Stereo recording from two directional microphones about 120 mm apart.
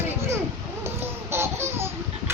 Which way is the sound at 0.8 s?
20° right (ahead or behind).